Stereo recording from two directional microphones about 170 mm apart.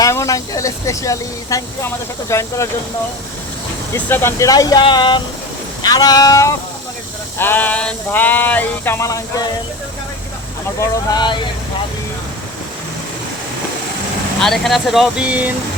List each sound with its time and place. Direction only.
0.0 s speech: 20° left (ahead or behind)
3.9 s speech: 15° left (ahead or behind)
10.8 s speech: 25° left (ahead or behind)
14.4 s speech: centre (ahead or behind)